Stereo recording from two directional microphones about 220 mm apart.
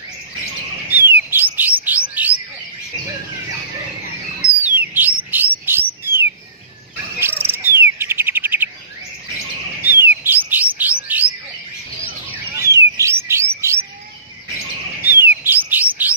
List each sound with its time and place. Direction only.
0.9 s bird: 10° right (ahead or behind)
4.6 s bird: 10° right (ahead or behind)
9.8 s bird: 10° right (ahead or behind)
12.5 s music: 15° right (ahead or behind)
15.0 s bird: 10° right (ahead or behind)